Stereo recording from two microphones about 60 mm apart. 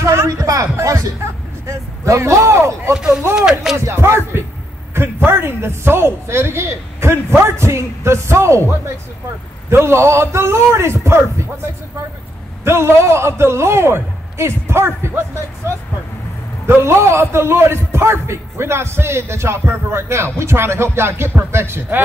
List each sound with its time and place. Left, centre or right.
0.4 s music: right
0.8 s a man's voice: right
3.3 s a sound: centre
3.7 s a sound: right
4.9 s a man's voice: right
16.8 s a man's voice: right